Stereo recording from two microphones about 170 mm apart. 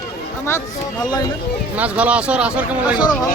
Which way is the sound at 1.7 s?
10° right (ahead or behind).